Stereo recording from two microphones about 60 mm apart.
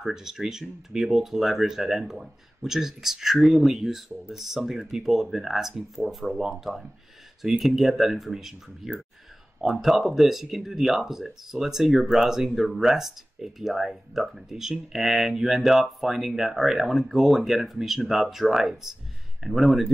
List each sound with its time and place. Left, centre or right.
0.0 s speech: centre